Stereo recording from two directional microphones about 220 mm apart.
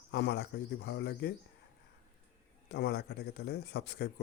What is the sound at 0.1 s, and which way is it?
Speech, 50° left (ahead or behind).